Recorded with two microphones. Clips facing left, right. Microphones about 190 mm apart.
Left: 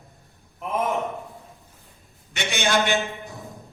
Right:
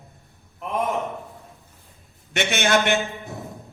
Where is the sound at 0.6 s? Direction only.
Centre (ahead or behind).